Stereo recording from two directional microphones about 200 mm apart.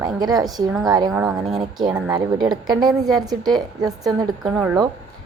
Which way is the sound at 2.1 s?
20° right (ahead or behind).